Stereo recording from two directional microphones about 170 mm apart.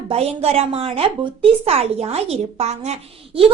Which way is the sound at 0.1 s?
35° right (ahead or behind).